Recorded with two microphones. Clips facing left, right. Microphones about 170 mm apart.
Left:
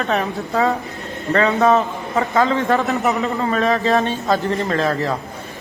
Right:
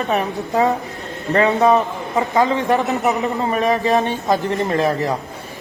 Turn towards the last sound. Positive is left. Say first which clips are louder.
# right 1 dB
turn(degrees=-15)  # may be behind; listen again after turning